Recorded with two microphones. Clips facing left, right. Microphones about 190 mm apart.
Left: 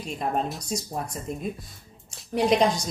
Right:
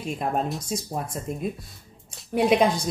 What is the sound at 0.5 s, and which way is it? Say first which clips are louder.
Speech: right 2 dB; centre (ahead or behind).